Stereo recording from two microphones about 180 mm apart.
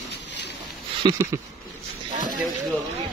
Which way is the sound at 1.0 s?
25° right (ahead or behind).